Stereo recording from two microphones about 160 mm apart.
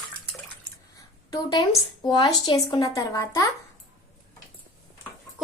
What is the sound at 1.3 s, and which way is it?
Speech, 20° left (ahead or behind).